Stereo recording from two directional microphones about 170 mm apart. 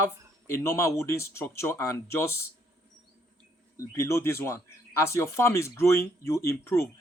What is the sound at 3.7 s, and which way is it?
Speech, 15° left (ahead or behind).